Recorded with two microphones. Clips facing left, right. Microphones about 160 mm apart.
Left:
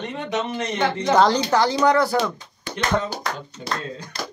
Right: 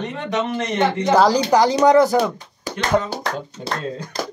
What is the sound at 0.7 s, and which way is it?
Speech, 10° right (ahead or behind).